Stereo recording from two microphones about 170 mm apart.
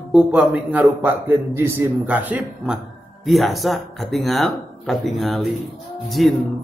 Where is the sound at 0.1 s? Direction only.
5° right (ahead or behind).